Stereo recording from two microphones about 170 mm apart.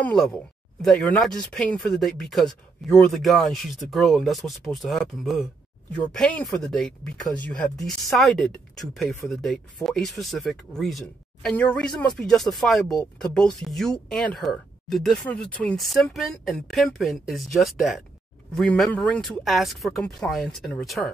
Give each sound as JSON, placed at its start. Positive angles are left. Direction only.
{"t": 0.0, "sound": "speech", "side_deg": 5}